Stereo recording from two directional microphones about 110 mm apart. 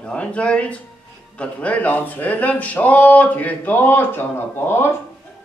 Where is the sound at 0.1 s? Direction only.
10° left (ahead or behind).